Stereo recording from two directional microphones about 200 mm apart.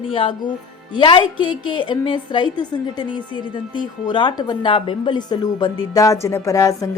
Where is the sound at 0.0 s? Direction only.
25° left (ahead or behind).